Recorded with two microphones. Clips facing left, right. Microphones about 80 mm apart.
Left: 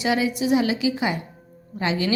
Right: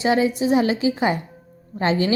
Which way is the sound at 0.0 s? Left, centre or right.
Right.